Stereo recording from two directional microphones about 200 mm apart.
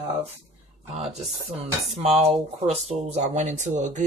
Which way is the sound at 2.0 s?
30° right (ahead or behind).